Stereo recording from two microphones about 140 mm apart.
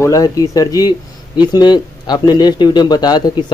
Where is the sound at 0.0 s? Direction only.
25° left (ahead or behind).